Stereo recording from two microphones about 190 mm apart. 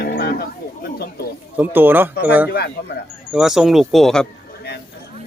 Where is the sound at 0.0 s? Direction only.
55° left (ahead or behind).